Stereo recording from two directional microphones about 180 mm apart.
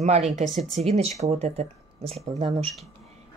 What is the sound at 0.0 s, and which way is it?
Speech, 35° right (ahead or behind).